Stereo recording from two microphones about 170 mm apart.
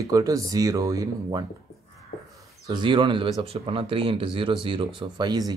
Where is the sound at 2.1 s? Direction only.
60° left (ahead or behind).